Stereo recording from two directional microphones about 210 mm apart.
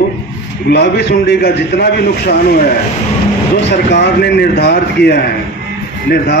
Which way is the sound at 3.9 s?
50° left (ahead or behind).